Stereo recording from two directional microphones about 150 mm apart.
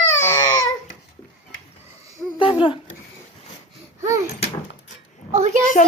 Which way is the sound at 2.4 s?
35° left (ahead or behind).